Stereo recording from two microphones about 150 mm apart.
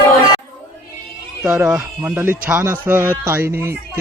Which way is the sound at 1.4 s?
5° right (ahead or behind).